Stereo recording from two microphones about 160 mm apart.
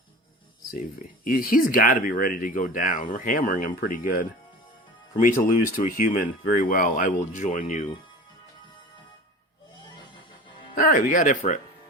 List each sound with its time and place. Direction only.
1.2 s speech: 60° left (ahead or behind)
10.8 s speech: 60° left (ahead or behind)